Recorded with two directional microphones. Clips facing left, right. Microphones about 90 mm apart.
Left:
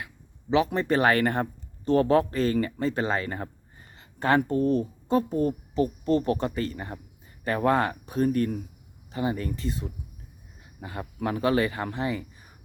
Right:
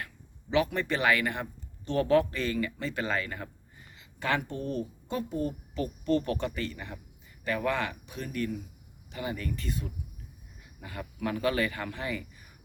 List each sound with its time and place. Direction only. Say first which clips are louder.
0.5 s speech: left 5 dB; 30° left (ahead or behind)
5.7 s speech: left 3 dB; 30° left (ahead or behind)
9.1 s speech: left 6 dB; 30° left (ahead or behind)